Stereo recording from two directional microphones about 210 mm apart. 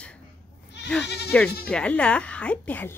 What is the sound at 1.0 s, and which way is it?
Speech, 50° left (ahead or behind).